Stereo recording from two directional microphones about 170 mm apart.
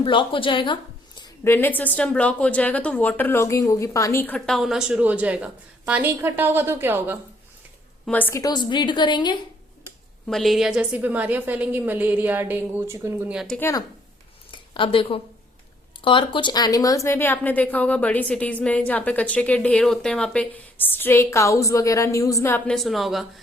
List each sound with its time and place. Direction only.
0.0 s a woman's voice: 30° left (ahead or behind)
1.5 s a woman's voice: 10° left (ahead or behind); by 7.2 s 10° right (ahead or behind)
8.0 s a woman's voice: 10° left (ahead or behind); by 9.4 s 25° left (ahead or behind)
10.2 s a woman's voice: centre (ahead or behind)
13.6 s a woman's voice: 20° left (ahead or behind)
14.5 s a sound: 30° left (ahead or behind)
16.0 s a woman's voice: 30° left (ahead or behind); by 23.2 s centre (ahead or behind)